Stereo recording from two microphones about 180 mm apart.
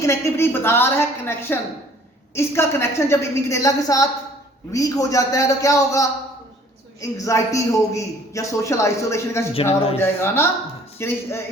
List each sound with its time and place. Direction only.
0.0 s a man's voice: 15° left (ahead or behind)